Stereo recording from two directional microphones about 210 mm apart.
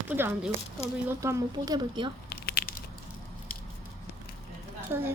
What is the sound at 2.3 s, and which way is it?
Crumpling, 50° left (ahead or behind).